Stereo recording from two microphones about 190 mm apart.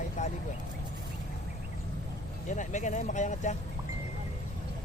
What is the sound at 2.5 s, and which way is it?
Speech, 40° left (ahead or behind).